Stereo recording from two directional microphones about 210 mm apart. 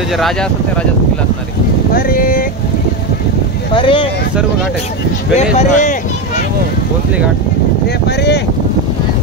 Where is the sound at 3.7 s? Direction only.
25° left (ahead or behind).